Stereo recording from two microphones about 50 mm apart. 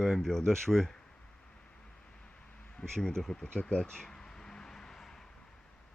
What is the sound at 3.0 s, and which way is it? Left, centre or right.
Speech, centre.